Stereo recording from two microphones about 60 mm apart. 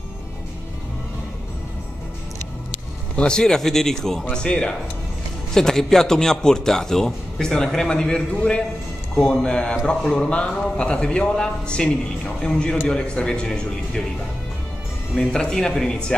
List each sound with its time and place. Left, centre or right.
3.2 s a man's voice: centre
15.1 s a man's voice: centre